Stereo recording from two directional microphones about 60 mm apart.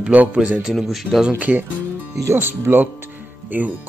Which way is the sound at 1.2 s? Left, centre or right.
Right.